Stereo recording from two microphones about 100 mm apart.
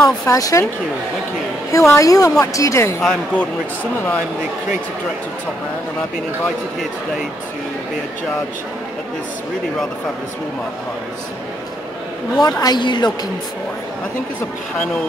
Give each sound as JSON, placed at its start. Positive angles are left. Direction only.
{"t": 0.0, "sound": "speech", "side_deg": 30}
{"t": 1.7, "sound": "speech", "side_deg": 30}
{"t": 3.0, "sound": "speech", "side_deg": 5}
{"t": 12.4, "sound": "a woman's voice", "side_deg": 40}